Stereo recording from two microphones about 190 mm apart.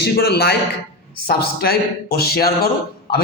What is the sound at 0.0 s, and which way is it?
Speech, 60° left (ahead or behind).